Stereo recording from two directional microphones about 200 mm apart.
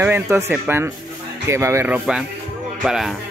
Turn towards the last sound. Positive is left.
turn(degrees=0)  # may be behind; listen again after turning